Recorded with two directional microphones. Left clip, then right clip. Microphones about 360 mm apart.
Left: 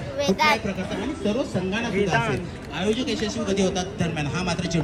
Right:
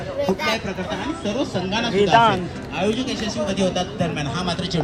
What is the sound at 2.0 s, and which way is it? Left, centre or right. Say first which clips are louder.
Speech: right 10 dB; centre.